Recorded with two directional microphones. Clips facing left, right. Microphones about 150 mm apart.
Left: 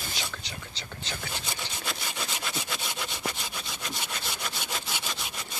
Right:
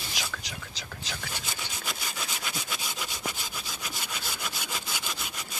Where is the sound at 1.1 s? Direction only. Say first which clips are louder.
Left 2 dB; 5° right (ahead or behind).